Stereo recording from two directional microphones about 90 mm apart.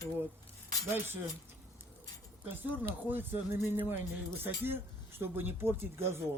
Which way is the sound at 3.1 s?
25° right (ahead or behind).